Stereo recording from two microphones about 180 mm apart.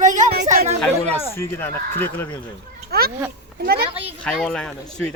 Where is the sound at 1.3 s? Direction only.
15° left (ahead or behind).